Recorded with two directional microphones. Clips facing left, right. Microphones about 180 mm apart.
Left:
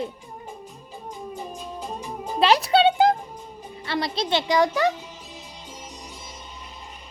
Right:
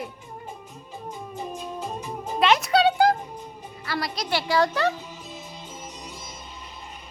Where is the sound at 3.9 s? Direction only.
25° left (ahead or behind).